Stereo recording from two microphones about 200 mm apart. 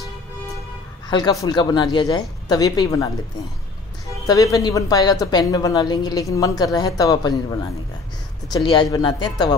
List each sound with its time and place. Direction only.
1.0 s a woman's voice: 20° left (ahead or behind)
4.3 s a woman's voice: 15° left (ahead or behind)
8.5 s a woman's voice: 20° left (ahead or behind)